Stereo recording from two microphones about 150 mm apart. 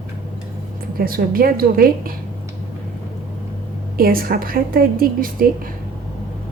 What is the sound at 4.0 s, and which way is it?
A woman's voice, 75° right (ahead or behind).